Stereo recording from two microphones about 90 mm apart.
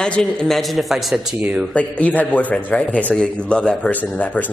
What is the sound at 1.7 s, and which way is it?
A man's voice, 15° left (ahead or behind).